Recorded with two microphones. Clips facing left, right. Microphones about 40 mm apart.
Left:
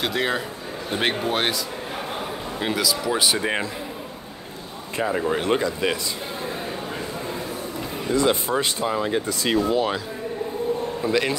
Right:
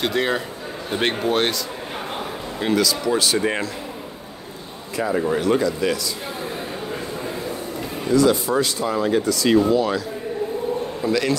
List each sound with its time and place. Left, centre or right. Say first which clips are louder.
0.0 s a man's voice: right 2 dB; centre
2.6 s speech: right 4 dB; centre
5.3 s speech: right 3 dB; left
8.1 s speech: right 4 dB; left
8.9 s speech: right 6 dB; centre
9.2 s speech: right 5 dB; left
11.1 s speech: right 2 dB; left